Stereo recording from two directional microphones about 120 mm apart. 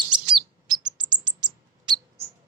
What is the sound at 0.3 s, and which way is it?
Bird, 35° right (ahead or behind).